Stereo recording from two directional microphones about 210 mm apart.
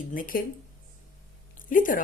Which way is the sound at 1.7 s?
40° left (ahead or behind).